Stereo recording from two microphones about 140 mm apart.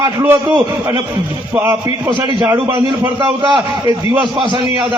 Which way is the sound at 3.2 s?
10° right (ahead or behind).